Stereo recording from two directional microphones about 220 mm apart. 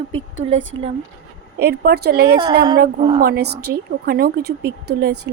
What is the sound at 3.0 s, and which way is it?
Speech, 25° right (ahead or behind).